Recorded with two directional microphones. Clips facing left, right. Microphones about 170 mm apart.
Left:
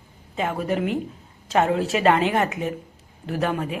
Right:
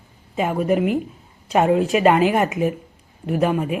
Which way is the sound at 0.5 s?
5° right (ahead or behind).